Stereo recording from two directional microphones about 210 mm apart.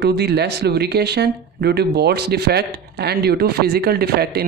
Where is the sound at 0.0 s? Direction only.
50° right (ahead or behind).